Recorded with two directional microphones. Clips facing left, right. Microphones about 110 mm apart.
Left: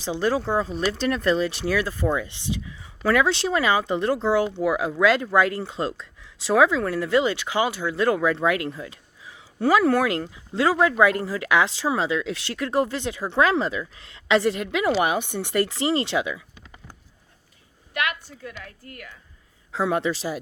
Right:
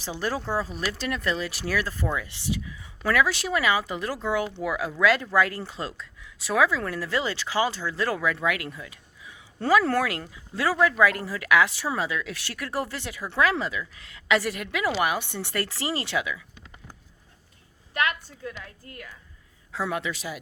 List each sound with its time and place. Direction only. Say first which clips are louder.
0.0 s speech: left 6 dB; 20° left (ahead or behind)
9.6 s speech: left 3 dB; 15° left (ahead or behind)
17.9 s a woman's voice: even; 35° right (ahead or behind)
19.7 s a man's voice: left 6 dB; 30° left (ahead or behind)